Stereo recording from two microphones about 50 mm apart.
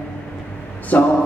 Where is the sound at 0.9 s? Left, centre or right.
Left.